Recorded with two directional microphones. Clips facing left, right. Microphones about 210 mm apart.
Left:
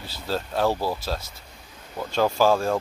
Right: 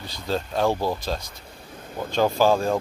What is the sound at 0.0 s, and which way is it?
Speech, 5° left (ahead or behind).